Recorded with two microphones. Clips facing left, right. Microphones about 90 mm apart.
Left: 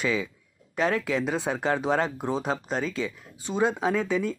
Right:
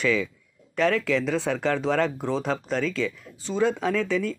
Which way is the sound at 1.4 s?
40° left (ahead or behind).